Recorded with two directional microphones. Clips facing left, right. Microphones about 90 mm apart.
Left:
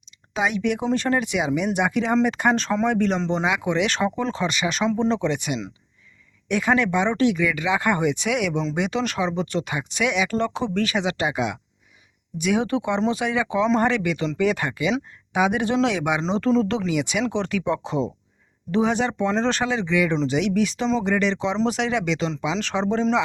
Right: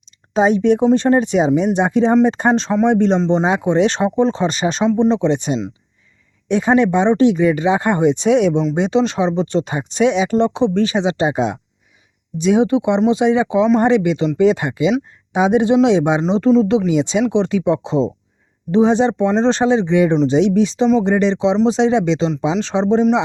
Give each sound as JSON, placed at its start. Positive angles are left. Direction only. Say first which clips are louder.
{"t": 0.3, "sound": "speech", "louder": "right 10 dB", "side_deg": -35}
{"t": 4.9, "sound": "speech", "louder": "right 8 dB", "side_deg": -20}
{"t": 16.2, "sound": "speech", "louder": "right 7 dB", "side_deg": -15}